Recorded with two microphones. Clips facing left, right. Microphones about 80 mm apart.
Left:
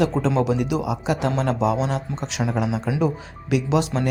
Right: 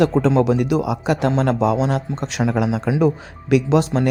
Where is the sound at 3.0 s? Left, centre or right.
Right.